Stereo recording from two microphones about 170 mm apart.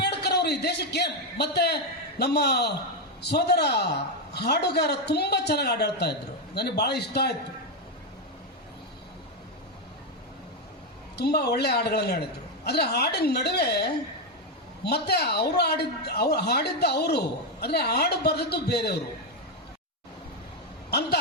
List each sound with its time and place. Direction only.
0.0 s a man's voice: 75° left (ahead or behind)
11.2 s speech: 75° left (ahead or behind)